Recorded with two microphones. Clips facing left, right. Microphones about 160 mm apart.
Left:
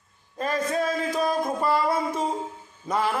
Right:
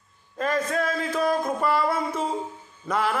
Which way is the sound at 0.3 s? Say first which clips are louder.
Right 1 dB; 15° left (ahead or behind).